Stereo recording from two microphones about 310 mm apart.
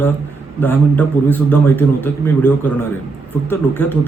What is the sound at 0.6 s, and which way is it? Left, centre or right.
A man's voice, centre.